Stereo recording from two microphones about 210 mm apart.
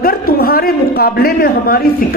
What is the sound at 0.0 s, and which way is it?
A man's voice, 45° left (ahead or behind).